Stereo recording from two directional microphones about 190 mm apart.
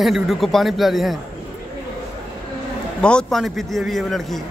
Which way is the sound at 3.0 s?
5° left (ahead or behind).